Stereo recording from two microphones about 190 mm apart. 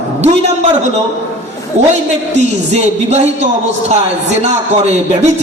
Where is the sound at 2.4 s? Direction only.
35° right (ahead or behind).